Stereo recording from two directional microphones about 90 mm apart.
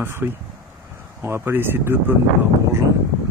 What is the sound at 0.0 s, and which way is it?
Speech, 25° right (ahead or behind).